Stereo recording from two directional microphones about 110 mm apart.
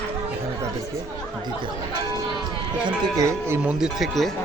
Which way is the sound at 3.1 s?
30° right (ahead or behind).